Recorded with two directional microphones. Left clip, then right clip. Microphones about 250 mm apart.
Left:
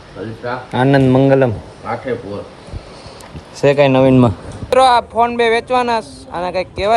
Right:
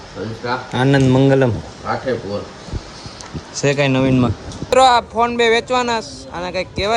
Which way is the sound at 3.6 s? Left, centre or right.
Centre.